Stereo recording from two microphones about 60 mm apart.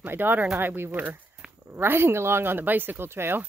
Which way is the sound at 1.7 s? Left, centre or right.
Right.